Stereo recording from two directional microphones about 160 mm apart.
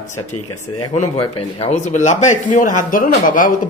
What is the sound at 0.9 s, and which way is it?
Speech, 35° left (ahead or behind).